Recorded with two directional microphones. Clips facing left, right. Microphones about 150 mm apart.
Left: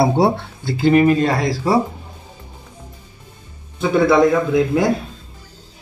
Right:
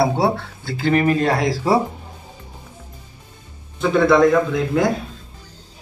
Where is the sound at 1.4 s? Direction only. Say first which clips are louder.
Even; 5° right (ahead or behind).